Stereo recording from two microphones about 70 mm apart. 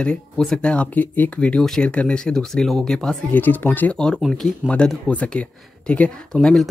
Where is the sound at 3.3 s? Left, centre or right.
Left.